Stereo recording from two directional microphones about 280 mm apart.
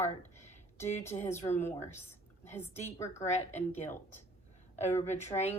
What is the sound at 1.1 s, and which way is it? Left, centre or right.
A woman's voice, centre.